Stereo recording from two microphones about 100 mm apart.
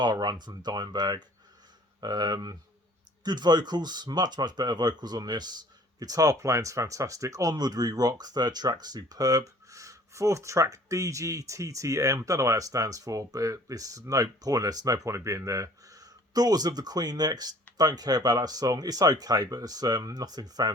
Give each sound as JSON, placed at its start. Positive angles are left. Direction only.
{"t": 0.0, "sound": "speech", "side_deg": -45}